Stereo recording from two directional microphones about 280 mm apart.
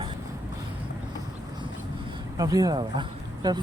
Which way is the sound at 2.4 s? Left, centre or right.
Centre.